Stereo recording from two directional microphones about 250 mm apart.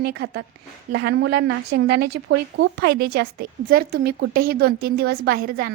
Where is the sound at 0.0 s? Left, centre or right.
Right.